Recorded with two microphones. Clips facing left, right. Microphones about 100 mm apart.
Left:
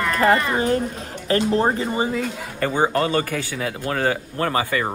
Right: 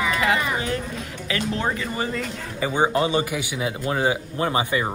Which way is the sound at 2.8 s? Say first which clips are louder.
Even; 15° right (ahead or behind).